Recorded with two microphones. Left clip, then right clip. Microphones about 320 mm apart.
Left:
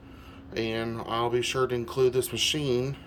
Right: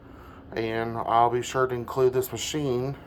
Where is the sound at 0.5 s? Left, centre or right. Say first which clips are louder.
Right 2 dB; centre.